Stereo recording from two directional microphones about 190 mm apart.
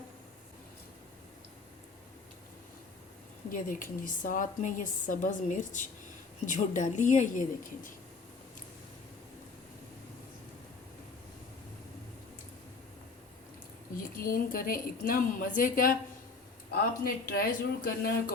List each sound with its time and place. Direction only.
3.5 s a woman's voice: 45° left (ahead or behind)
13.9 s a woman's voice: 50° left (ahead or behind)
17.2 s a woman's voice: 50° left (ahead or behind)